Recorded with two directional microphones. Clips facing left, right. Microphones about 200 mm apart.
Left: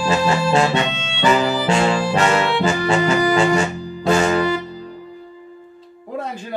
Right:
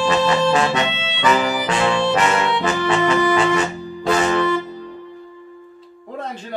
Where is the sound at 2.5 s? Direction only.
30° left (ahead or behind).